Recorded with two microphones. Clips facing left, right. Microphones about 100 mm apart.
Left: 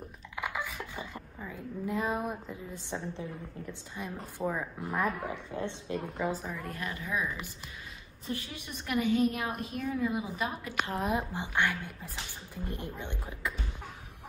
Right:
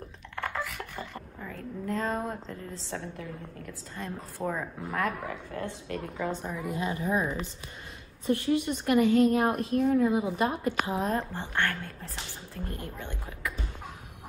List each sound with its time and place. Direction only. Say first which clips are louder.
0.4 s a sound: right 2 dB; 10° left (ahead or behind)
0.7 s speech: right 1 dB; 15° left (ahead or behind)
4.5 s a woman's voice: right 1 dB; centre (ahead or behind)
5.2 s speech: even; 20° left (ahead or behind)
5.9 s a woman's voice: even; 5° left (ahead or behind)
6.7 s speech: right 8 dB; 25° right (ahead or behind)
8.3 s a woman's voice: right 13 dB; 70° right (ahead or behind)
9.4 s a woman's voice: right 9 dB; 70° right (ahead or behind)
9.8 s speech: right 6 dB; 55° right (ahead or behind)
10.8 s a woman's voice: left 1 dB; 5° right (ahead or behind)
11.1 s a woman's voice: right 1 dB; 15° left (ahead or behind)